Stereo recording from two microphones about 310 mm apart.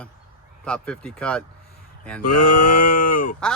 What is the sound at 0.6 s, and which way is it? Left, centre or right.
Speech, centre.